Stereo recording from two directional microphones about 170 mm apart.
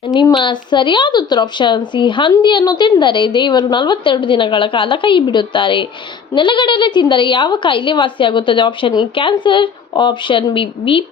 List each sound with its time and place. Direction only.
0.2 s a woman's voice: 25° left (ahead or behind)